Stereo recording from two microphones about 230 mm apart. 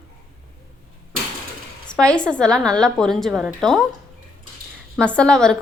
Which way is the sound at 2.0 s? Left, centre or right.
Centre.